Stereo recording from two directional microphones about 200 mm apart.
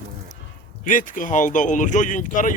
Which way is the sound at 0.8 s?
40° left (ahead or behind).